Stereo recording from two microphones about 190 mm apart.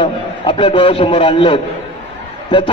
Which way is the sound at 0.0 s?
25° left (ahead or behind).